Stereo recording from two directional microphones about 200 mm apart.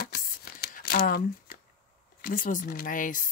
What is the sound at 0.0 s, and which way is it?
Tearing, 50° left (ahead or behind).